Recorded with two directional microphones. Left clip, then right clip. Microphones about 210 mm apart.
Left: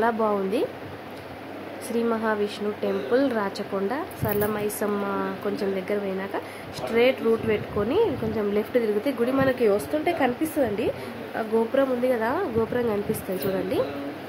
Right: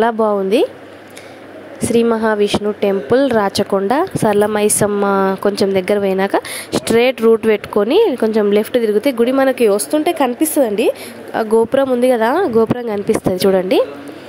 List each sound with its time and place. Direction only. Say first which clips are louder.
0.0 s speech: right 9 dB; 35° right (ahead or behind)
2.0 s a woman's voice: right 11 dB; 40° right (ahead or behind)